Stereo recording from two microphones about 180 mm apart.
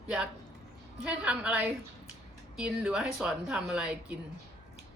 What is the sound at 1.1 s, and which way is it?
A woman's voice, 5° right (ahead or behind).